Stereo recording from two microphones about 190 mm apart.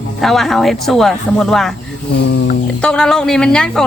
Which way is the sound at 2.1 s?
65° left (ahead or behind).